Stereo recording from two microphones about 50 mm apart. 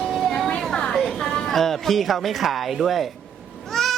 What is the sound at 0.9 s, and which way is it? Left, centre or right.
A woman's voice, centre.